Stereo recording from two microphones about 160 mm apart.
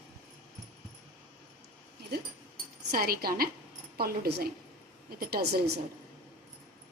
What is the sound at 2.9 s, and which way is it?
A woman's voice, 70° right (ahead or behind).